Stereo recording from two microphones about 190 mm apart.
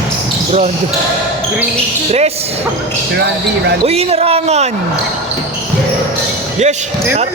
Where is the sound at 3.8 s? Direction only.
30° right (ahead or behind).